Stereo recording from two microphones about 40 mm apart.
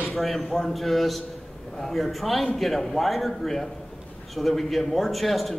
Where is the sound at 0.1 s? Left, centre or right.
Centre.